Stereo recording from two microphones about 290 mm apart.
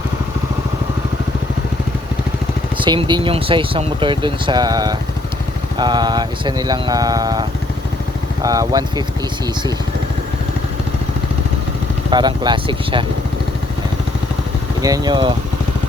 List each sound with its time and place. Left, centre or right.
2.8 s speech: centre
12.1 s speech: centre
14.8 s speech: centre